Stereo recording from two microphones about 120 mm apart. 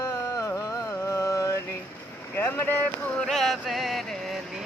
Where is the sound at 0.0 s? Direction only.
30° left (ahead or behind).